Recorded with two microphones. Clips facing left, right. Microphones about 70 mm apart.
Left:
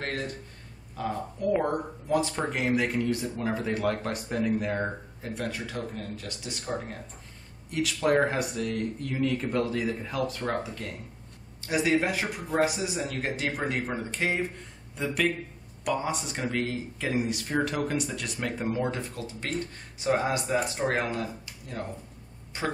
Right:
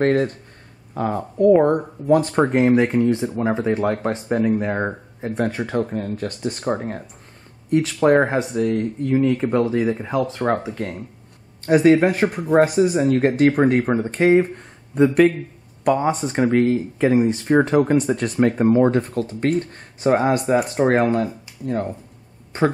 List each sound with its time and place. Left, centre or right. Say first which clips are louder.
0.0 s speech: right 15 dB; right
2.6 s speech: right 8 dB; right
5.6 s speech: right 12 dB; right
7.7 s speech: right 9 dB; right